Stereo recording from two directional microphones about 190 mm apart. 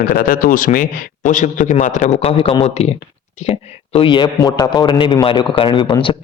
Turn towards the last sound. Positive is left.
turn(degrees=25)  # may be behind; listen again after turning